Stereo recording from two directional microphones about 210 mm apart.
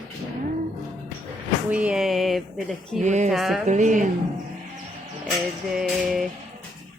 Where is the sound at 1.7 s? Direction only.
5° right (ahead or behind).